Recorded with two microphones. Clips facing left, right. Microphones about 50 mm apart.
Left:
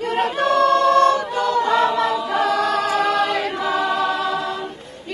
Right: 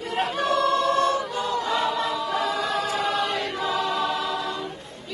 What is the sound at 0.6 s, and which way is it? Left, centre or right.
Choir, left.